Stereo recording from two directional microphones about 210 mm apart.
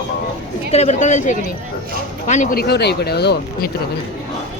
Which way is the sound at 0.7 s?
30° left (ahead or behind).